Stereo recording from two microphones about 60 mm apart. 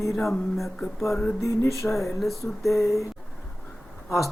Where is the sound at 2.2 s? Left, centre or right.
Centre.